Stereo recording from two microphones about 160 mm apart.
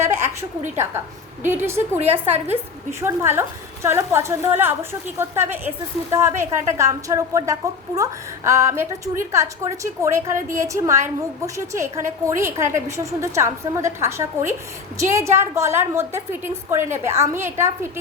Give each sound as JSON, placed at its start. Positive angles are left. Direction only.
{"t": 0.0, "sound": "a woman's voice", "side_deg": -15}